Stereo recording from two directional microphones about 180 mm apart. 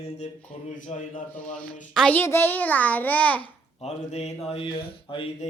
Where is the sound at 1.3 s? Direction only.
5° left (ahead or behind).